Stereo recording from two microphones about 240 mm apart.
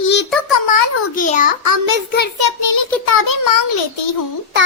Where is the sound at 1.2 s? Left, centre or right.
Left.